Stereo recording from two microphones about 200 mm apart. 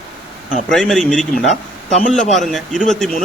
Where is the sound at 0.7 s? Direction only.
Centre (ahead or behind).